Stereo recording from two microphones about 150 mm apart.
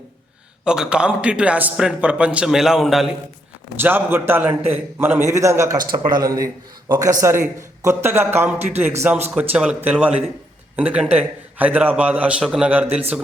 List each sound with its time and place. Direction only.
0.6 s a man's voice: 5° right (ahead or behind)
3.8 s a man's voice: 15° right (ahead or behind)